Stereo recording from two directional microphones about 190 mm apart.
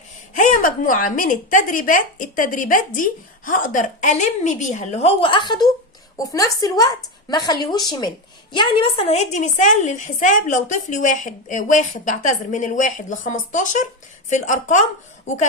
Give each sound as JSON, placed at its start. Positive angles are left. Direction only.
{"t": 0.3, "sound": "a woman's voice", "side_deg": 45}